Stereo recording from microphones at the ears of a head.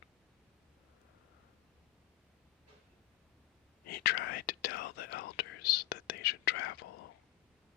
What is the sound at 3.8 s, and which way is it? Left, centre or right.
Whispering, left.